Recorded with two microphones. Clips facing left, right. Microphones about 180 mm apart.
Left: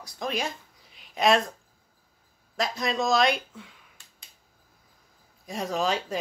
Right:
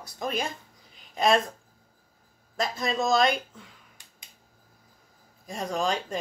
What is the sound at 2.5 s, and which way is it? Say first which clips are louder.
Speech: even; centre (ahead or behind).